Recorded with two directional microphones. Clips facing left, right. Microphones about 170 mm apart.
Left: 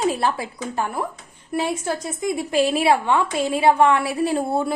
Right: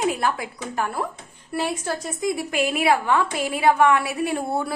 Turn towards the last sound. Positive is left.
turn(degrees=25)  # may be behind; listen again after turning